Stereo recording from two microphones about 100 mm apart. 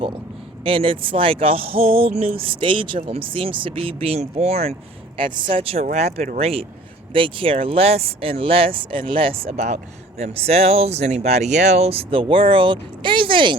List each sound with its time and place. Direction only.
0.6 s speech: 65° right (ahead or behind); by 4.7 s 90° right
5.1 s speech: 55° right (ahead or behind)
5.6 s speech: 85° right
7.1 s speech: 60° right (ahead or behind)